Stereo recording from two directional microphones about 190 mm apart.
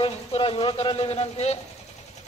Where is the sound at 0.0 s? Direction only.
30° left (ahead or behind).